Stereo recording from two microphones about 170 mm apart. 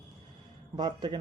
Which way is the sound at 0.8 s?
25° right (ahead or behind).